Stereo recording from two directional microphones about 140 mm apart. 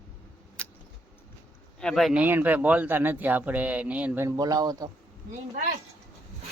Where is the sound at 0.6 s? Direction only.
10° left (ahead or behind).